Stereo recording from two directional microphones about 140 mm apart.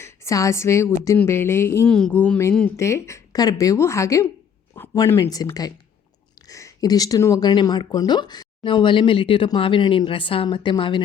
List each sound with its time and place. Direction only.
0.0 s speech: 20° left (ahead or behind)
1.9 s speech: 5° left (ahead or behind)
2.7 s speech: 20° left (ahead or behind); by 11.0 s 35° left (ahead or behind)